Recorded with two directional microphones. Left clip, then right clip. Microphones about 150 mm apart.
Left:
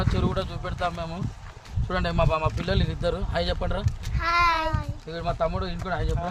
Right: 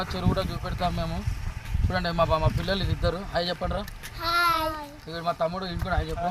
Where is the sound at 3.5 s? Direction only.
15° left (ahead or behind).